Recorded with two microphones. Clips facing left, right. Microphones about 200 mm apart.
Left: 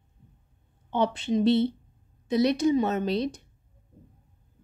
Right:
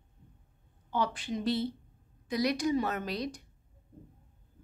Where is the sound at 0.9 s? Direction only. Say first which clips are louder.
Left 7 dB; 25° left (ahead or behind).